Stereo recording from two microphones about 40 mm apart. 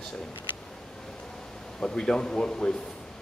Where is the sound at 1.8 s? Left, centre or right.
Centre.